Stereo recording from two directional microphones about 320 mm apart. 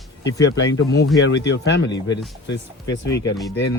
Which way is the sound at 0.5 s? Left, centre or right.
Left.